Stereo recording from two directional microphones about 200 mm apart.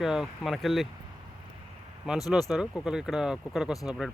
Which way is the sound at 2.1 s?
5° right (ahead or behind).